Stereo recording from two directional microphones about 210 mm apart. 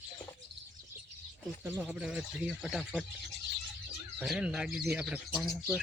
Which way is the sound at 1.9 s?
5° right (ahead or behind).